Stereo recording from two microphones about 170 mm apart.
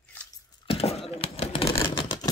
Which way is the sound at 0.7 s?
35° left (ahead or behind).